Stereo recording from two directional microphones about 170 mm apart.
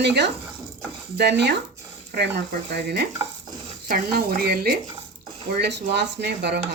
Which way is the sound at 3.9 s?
60° right (ahead or behind).